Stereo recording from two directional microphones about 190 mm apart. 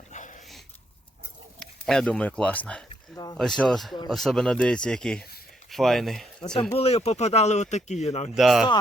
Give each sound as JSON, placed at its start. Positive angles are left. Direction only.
{"t": 0.1, "sound": "dog", "side_deg": 40}
{"t": 1.5, "sound": "speech", "side_deg": 5}
{"t": 6.4, "sound": "speech", "side_deg": 20}
{"t": 8.4, "sound": "speech", "side_deg": 0}